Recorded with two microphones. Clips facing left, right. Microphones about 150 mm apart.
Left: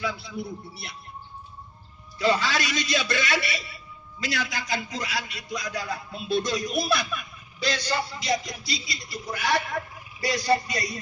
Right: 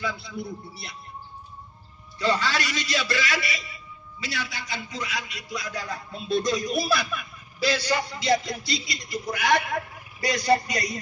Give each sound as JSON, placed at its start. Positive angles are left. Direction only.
{"t": 0.0, "sound": "a man's voice", "side_deg": 0}
{"t": 2.2, "sound": "a man's voice", "side_deg": 10}
{"t": 4.4, "sound": "a man's voice", "side_deg": 90}
{"t": 4.9, "sound": "a man's voice", "side_deg": 35}
{"t": 8.2, "sound": "a man's voice", "side_deg": -25}